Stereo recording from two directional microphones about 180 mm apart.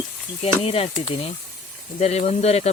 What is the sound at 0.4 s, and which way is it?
Speech, 35° left (ahead or behind).